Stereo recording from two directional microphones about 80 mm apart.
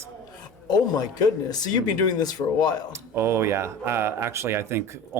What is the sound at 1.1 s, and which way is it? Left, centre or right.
Speech, left.